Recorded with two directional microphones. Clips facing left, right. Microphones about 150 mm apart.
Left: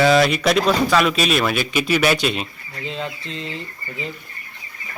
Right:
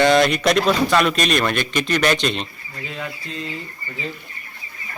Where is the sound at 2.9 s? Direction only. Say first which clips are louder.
Left 3 dB; 25° left (ahead or behind).